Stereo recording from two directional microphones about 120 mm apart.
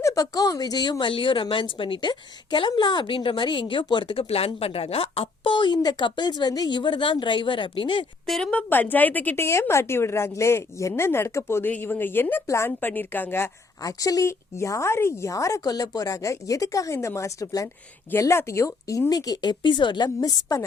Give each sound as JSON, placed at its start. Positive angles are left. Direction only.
{"t": 0.0, "sound": "speech", "side_deg": 30}
{"t": 8.3, "sound": "a woman's voice", "side_deg": 10}
{"t": 13.8, "sound": "a woman's voice", "side_deg": 30}